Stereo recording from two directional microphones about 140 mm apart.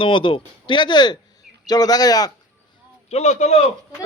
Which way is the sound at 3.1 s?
55° left (ahead or behind).